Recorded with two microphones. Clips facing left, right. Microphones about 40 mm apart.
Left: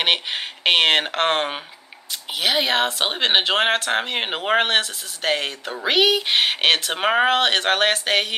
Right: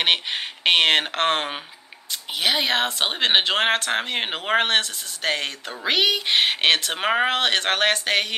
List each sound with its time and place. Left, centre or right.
0.0 s speech: centre